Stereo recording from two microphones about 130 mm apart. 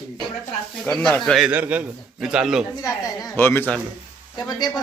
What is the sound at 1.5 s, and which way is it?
A man's voice, 10° right (ahead or behind).